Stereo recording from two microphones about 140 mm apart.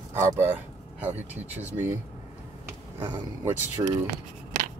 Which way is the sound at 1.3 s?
10° right (ahead or behind).